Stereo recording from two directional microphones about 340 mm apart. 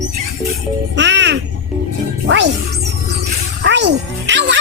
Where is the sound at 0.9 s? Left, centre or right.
Right.